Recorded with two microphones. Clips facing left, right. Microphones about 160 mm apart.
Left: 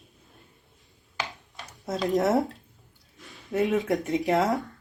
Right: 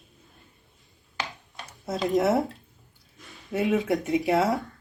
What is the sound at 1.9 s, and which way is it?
Speech, centre (ahead or behind).